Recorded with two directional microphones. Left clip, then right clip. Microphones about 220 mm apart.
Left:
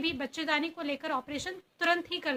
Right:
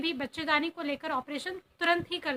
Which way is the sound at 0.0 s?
15° right (ahead or behind).